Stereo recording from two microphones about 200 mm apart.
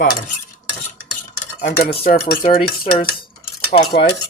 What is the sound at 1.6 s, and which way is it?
Dishes, 45° left (ahead or behind).